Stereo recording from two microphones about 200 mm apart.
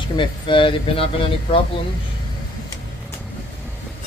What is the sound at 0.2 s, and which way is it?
Speech, 25° left (ahead or behind).